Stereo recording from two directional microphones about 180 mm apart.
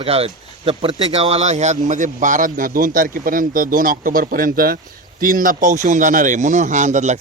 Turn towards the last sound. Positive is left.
turn(degrees=-40)  # may be behind; listen again after turning